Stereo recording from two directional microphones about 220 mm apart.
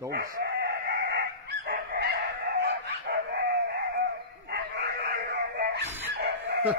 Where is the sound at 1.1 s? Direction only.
50° right (ahead or behind).